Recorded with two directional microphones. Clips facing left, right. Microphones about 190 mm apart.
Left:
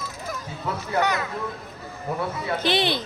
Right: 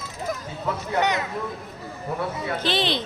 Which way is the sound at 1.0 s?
20° right (ahead or behind).